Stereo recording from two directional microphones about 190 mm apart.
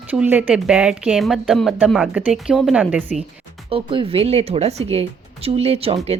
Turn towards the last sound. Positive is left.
turn(degrees=-30)  # may be behind; listen again after turning